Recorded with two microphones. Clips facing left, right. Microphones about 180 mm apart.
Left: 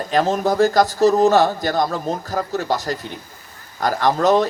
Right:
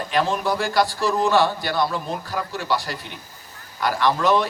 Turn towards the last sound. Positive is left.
turn(degrees=45)  # may be behind; listen again after turning